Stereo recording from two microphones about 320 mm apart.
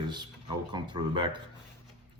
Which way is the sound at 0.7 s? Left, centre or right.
Centre.